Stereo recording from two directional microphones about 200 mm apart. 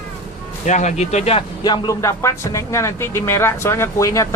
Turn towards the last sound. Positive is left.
turn(degrees=15)  # may be behind; listen again after turning